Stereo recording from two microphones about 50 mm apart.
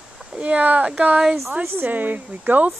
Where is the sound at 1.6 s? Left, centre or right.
Right.